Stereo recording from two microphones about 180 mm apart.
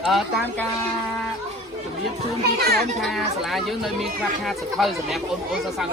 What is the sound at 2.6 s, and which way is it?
Speech, 60° right (ahead or behind).